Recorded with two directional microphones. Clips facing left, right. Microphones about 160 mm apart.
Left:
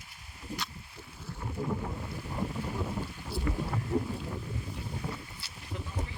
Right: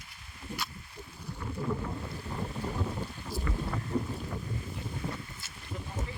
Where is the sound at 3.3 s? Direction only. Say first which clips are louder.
Left 2 dB; 40° right (ahead or behind).